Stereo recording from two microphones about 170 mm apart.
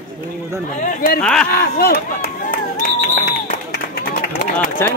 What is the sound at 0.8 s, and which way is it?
Speech, 50° left (ahead or behind).